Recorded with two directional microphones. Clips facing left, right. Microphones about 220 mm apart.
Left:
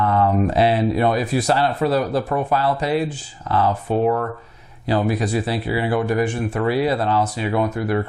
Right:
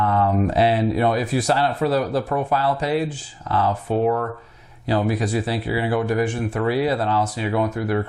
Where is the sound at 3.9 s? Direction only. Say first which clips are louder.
Even; 25° left (ahead or behind).